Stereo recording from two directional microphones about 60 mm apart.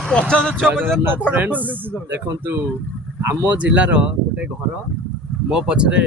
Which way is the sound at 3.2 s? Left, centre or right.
Right.